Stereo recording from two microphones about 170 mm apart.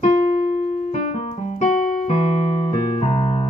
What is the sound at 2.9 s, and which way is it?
Music, 35° left (ahead or behind).